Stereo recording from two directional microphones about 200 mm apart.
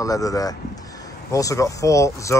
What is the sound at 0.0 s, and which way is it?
Speech, 15° left (ahead or behind).